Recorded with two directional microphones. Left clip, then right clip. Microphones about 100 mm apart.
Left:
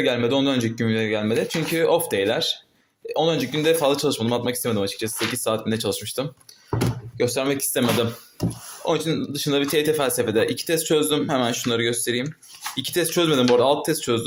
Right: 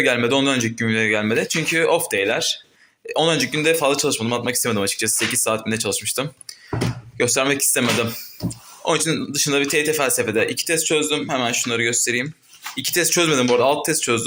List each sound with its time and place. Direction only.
0.0 s speech: 10° left (ahead or behind)
0.6 s speech: 20° left (ahead or behind)
1.9 s speech: 25° left (ahead or behind)
3.1 s speech: centre (ahead or behind)
3.5 s speech: 25° left (ahead or behind)
4.7 s speech: 5° left (ahead or behind)
5.3 s speech: 20° left (ahead or behind)
7.2 s speech: 5° left (ahead or behind)
9.7 s speech: 40° left (ahead or behind)
10.0 s speech: 30° left (ahead or behind)
10.8 s speech: 55° left (ahead or behind); by 14.2 s 25° left (ahead or behind)